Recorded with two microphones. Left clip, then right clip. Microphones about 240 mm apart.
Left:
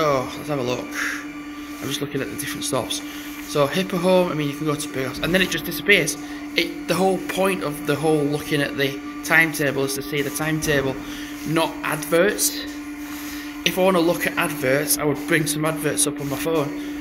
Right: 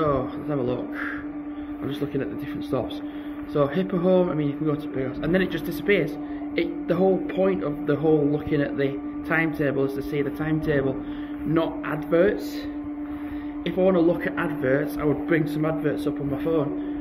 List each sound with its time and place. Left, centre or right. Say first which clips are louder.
0.0 s a man's voice: left 3 dB; centre
3.5 s a man's voice: left 3 dB; centre
13.7 s a man's voice: left 3 dB; centre